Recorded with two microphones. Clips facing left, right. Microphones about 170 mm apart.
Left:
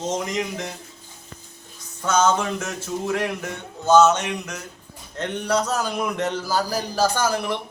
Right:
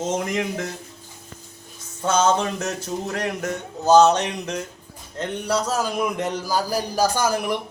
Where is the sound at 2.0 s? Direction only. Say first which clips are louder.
Even; 30° right (ahead or behind).